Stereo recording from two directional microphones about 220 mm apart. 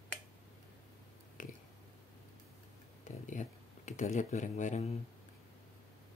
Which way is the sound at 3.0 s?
35° left (ahead or behind).